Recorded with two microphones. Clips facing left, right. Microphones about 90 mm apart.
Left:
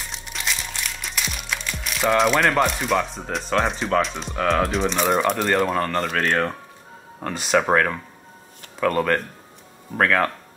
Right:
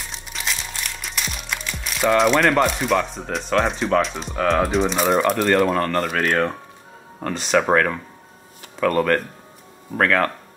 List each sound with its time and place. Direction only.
0.0 s crumpling: centre (ahead or behind)
7.2 s speech: 5° left (ahead or behind)